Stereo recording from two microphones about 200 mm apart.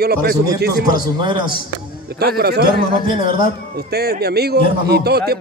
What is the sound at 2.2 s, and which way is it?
Speech, 50° right (ahead or behind).